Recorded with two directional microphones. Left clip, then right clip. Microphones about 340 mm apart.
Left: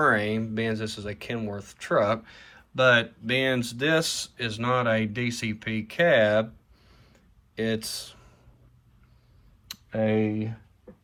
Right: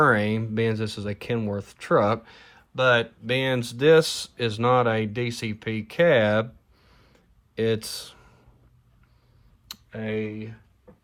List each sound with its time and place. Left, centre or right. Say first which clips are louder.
0.0 s speech: right 2 dB; right
9.9 s speech: left 5 dB; centre